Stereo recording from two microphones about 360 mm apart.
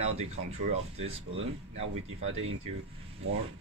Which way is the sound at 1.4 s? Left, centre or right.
Right.